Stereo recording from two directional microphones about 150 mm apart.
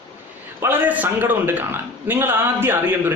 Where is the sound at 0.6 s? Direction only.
15° right (ahead or behind).